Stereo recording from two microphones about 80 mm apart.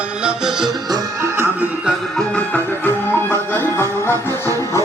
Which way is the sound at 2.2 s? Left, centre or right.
Centre.